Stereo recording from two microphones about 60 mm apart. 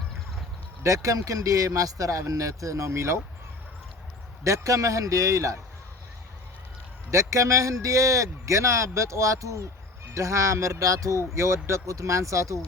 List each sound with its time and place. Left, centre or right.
0.8 s speech: right
4.4 s speech: right
7.1 s speech: right
11.3 s speech: right